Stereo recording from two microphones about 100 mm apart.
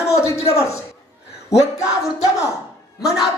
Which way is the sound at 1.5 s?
35° left (ahead or behind).